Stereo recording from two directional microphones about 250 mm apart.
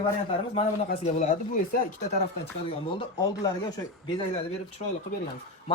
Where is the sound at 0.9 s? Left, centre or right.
Left.